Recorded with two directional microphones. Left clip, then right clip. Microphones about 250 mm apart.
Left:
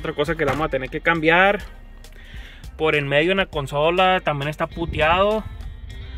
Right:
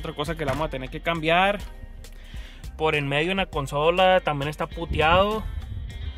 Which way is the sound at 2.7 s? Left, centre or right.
Centre.